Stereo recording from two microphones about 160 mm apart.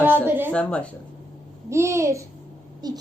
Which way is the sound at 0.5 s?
10° left (ahead or behind).